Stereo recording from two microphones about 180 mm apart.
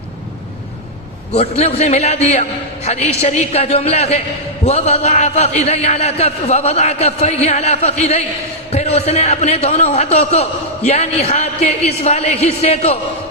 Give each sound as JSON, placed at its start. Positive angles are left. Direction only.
{"t": 1.3, "sound": "a man's voice", "side_deg": 35}